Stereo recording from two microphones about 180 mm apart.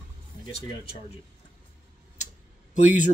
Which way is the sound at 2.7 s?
45° left (ahead or behind).